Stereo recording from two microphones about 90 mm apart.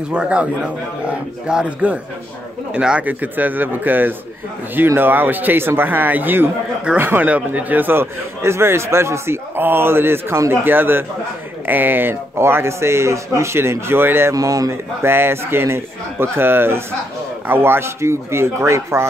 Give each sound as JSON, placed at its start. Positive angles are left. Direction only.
{"t": 0.1, "sound": "a man's voice", "side_deg": -10}
{"t": 14.3, "sound": "a man's voice", "side_deg": -40}